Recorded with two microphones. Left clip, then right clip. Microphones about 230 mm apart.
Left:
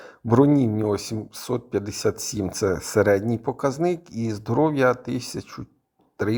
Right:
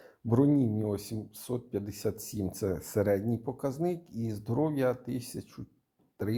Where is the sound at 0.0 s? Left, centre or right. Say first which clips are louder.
Left 9 dB; left.